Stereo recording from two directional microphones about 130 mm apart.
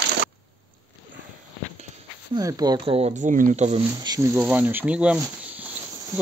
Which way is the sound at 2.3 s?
30° right (ahead or behind).